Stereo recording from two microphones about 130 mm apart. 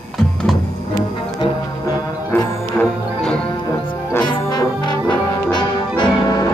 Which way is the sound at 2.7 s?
10° left (ahead or behind).